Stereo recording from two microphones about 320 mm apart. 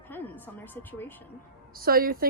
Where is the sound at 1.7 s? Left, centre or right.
Right.